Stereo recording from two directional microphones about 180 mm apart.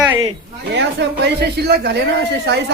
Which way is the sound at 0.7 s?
70° right (ahead or behind).